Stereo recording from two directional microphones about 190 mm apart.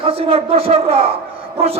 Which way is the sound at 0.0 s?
30° right (ahead or behind).